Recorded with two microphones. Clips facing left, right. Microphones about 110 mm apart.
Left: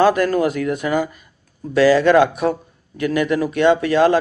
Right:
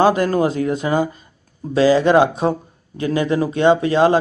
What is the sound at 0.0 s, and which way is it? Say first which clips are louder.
A man's voice: even; 25° right (ahead or behind).